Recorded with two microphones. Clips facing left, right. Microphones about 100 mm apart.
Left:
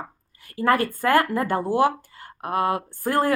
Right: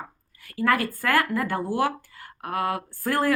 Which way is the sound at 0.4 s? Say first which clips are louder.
Left 3 dB; 30° left (ahead or behind).